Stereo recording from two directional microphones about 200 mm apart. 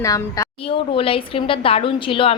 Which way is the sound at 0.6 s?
30° left (ahead or behind).